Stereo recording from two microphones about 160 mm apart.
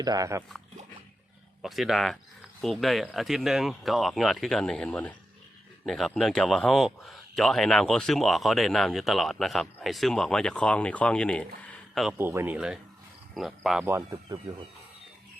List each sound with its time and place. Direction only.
0.0 s speech: 20° right (ahead or behind)
1.6 s speech: centre (ahead or behind)
12.1 s speech: 15° right (ahead or behind)
13.8 s speech: 20° right (ahead or behind)